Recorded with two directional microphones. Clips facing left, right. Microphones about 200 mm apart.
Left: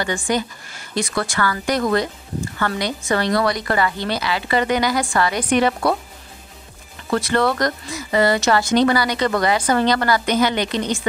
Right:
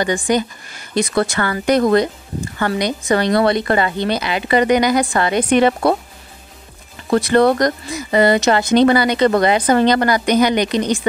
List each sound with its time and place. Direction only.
0.0 s a woman's voice: 20° right (ahead or behind)
7.2 s a woman's voice: 15° right (ahead or behind)